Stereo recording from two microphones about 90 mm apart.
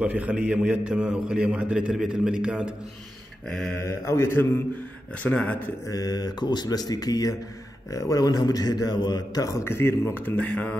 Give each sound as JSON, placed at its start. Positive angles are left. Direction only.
{"t": 0.0, "sound": "a man's voice", "side_deg": -15}
{"t": 3.7, "sound": "a man's voice", "side_deg": 30}
{"t": 5.2, "sound": "speech", "side_deg": 15}
{"t": 5.9, "sound": "a man's voice", "side_deg": 45}